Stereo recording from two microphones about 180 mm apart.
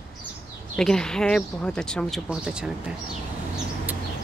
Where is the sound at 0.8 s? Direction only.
5° left (ahead or behind).